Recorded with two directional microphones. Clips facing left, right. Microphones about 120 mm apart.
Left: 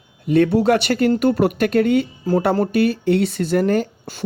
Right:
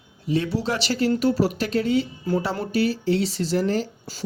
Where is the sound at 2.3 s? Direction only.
40° left (ahead or behind).